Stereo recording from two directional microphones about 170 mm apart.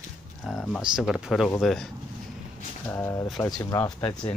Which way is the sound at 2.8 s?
15° left (ahead or behind).